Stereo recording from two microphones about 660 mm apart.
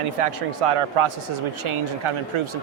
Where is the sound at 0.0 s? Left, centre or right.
Right.